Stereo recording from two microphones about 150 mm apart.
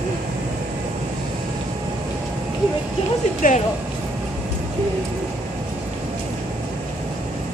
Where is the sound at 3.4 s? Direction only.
60° left (ahead or behind).